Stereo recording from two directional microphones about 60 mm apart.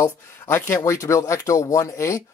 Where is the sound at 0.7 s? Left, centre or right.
Left.